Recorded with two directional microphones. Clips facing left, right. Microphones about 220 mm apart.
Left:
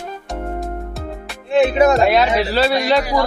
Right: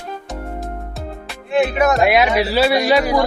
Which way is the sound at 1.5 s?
30° left (ahead or behind).